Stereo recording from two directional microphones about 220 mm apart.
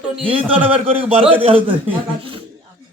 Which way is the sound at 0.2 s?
25° right (ahead or behind).